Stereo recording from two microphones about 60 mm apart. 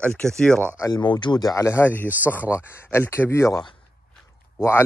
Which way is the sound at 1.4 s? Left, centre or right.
Left.